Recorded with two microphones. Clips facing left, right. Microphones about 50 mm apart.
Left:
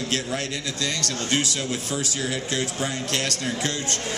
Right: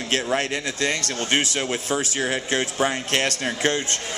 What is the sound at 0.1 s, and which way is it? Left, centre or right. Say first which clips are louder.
Speech: right 8 dB; right.